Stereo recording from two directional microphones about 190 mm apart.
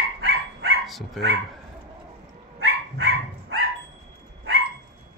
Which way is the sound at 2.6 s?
90° right.